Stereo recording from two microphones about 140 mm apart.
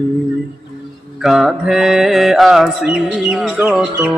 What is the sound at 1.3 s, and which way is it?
Mantra, 5° right (ahead or behind).